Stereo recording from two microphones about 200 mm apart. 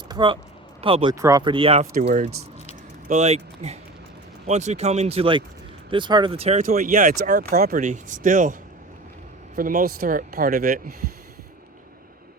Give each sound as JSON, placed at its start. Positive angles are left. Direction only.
{"t": 0.1, "sound": "speech", "side_deg": -25}
{"t": 1.1, "sound": "speech", "side_deg": -15}
{"t": 1.9, "sound": "speech", "side_deg": -45}
{"t": 7.3, "sound": "speech", "side_deg": -50}
{"t": 9.6, "sound": "speech", "side_deg": -45}